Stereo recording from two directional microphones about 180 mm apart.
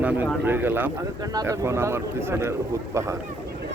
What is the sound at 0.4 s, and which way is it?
Speech, 10° right (ahead or behind).